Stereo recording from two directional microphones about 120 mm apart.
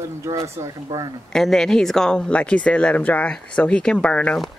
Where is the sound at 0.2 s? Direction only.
25° right (ahead or behind).